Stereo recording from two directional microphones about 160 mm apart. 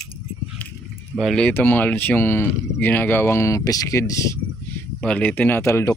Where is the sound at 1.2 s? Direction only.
Centre (ahead or behind); by 4.4 s 20° left (ahead or behind).